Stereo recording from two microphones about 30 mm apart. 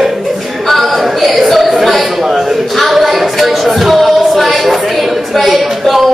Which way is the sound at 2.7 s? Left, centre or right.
Centre.